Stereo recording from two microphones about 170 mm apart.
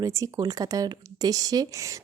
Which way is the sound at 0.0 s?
20° right (ahead or behind).